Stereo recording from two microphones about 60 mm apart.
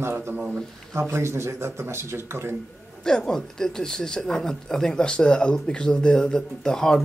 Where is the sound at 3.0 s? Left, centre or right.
Centre.